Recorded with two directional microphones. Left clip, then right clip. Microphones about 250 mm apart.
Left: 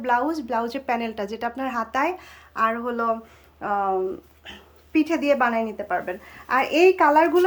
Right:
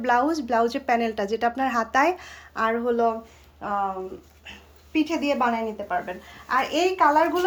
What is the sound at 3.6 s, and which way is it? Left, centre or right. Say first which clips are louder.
Speech: left 4 dB; left.